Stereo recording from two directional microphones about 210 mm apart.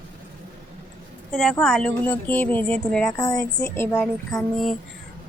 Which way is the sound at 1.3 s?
Centre (ahead or behind).